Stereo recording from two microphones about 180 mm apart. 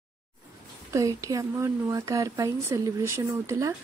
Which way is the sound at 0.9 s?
15° right (ahead or behind).